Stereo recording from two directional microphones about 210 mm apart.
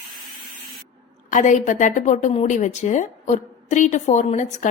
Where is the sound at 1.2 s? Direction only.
35° left (ahead or behind).